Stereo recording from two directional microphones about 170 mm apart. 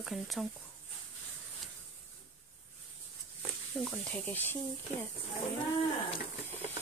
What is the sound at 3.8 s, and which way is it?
Speech, 10° left (ahead or behind).